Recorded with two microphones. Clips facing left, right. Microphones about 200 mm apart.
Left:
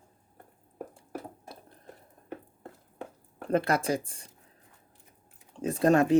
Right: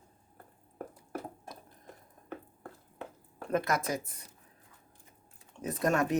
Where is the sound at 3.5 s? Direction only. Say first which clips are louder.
Left 4 dB; 30° left (ahead or behind).